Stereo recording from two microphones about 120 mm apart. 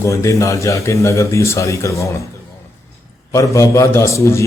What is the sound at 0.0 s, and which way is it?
A man's voice, 25° left (ahead or behind).